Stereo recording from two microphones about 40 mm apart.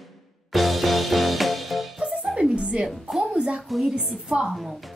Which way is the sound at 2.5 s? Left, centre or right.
Right.